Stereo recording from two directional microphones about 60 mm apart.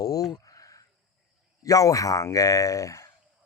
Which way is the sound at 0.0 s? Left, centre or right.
Left.